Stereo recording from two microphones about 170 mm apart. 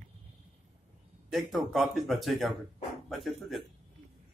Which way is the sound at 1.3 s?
Centre (ahead or behind).